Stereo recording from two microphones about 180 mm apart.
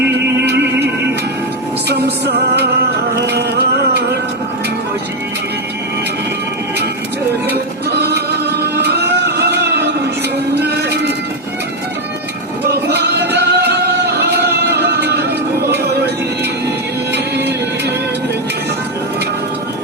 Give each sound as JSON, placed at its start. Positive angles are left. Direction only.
{"t": 0.4, "sound": "music", "side_deg": -70}
{"t": 1.9, "sound": "music", "side_deg": -65}
{"t": 7.4, "sound": "music", "side_deg": -65}
{"t": 12.7, "sound": "music", "side_deg": -65}
{"t": 17.1, "sound": "music", "side_deg": -70}